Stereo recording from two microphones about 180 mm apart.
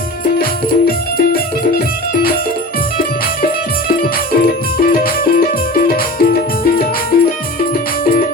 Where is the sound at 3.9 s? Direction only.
55° left (ahead or behind).